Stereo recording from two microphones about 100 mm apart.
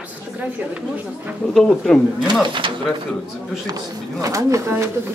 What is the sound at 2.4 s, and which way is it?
Speech, 55° right (ahead or behind).